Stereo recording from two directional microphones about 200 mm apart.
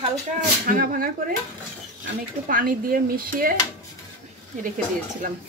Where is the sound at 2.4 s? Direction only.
45° right (ahead or behind).